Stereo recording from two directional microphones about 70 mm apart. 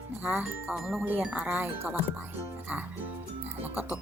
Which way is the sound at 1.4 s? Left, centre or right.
Right.